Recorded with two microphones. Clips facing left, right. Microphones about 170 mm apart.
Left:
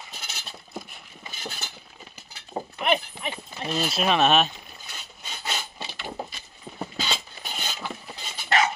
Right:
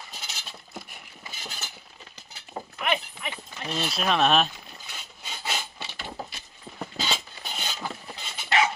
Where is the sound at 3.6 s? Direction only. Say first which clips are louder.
Left 3 dB; centre (ahead or behind).